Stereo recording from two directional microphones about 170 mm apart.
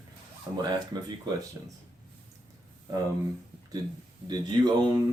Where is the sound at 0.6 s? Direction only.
25° right (ahead or behind).